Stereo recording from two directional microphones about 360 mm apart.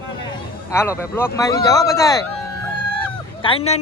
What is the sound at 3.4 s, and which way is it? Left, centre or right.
Speech, centre.